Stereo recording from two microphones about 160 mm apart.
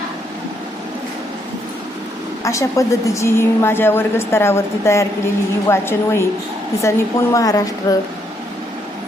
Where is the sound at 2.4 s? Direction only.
20° left (ahead or behind).